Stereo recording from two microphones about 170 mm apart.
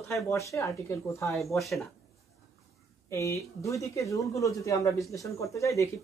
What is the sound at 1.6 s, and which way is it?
Speech, centre (ahead or behind).